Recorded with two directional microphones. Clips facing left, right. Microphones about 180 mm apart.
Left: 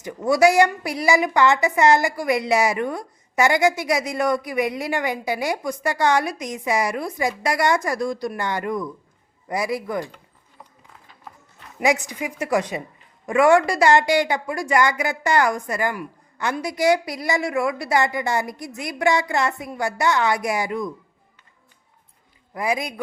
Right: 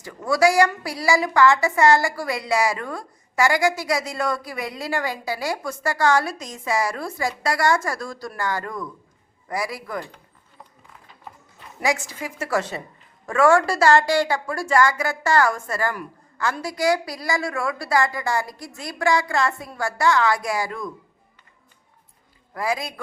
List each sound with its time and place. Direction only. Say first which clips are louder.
0.0 s a woman's voice: left 2 dB; 20° left (ahead or behind)
11.8 s a woman's voice: left 3 dB; 20° left (ahead or behind)
22.5 s a woman's voice: left 2 dB; 20° left (ahead or behind)